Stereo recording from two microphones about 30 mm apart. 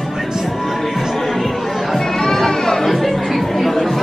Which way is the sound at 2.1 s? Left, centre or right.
Centre.